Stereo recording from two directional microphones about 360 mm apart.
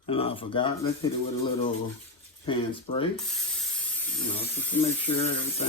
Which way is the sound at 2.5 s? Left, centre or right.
Centre.